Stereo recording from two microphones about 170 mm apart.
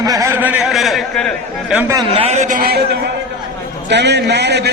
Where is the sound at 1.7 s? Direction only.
20° right (ahead or behind).